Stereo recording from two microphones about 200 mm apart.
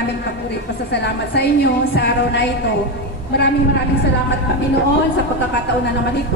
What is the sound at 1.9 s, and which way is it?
Speech, 55° left (ahead or behind).